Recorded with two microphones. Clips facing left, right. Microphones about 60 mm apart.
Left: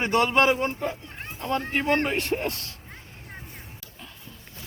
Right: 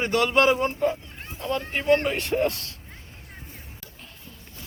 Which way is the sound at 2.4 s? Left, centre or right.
Left.